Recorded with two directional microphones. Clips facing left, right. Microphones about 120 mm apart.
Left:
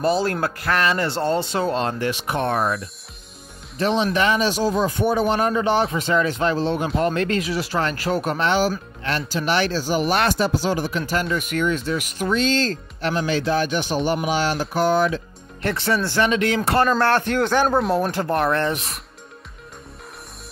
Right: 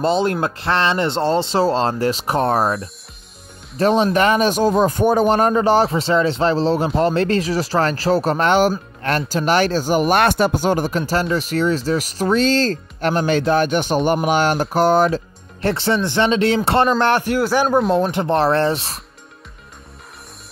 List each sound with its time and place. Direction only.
0.0 s speech: 20° right (ahead or behind)
8.5 s speech: 55° right (ahead or behind); by 16.9 s 25° right (ahead or behind)
17.0 s a man's voice: 10° right (ahead or behind)
17.9 s speech: 25° right (ahead or behind)